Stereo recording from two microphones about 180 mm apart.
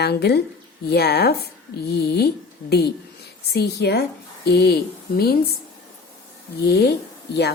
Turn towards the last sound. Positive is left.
turn(degrees=65)  # may be behind; listen again after turning